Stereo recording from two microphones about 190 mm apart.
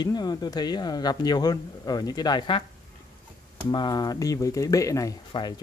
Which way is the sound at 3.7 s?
20° left (ahead or behind).